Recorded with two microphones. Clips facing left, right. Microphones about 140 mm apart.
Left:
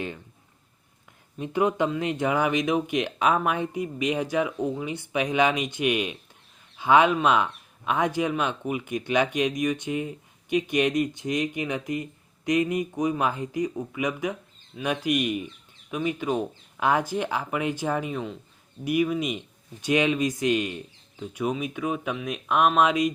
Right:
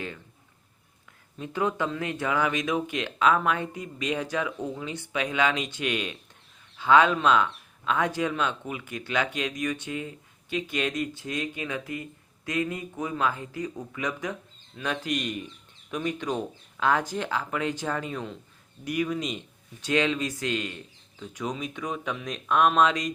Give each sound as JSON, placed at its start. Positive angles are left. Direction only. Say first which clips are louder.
{"t": 1.4, "sound": "speech", "louder": "left 4 dB", "side_deg": 15}